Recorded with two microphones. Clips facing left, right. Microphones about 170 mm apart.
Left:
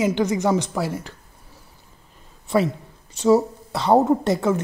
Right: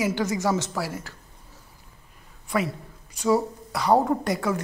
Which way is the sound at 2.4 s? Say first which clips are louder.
Left 6 dB; 25° left (ahead or behind).